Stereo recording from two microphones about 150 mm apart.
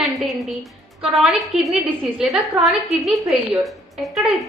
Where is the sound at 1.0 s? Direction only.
Centre (ahead or behind).